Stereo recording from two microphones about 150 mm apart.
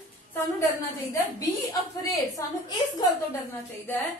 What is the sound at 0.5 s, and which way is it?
A woman's voice, 20° left (ahead or behind).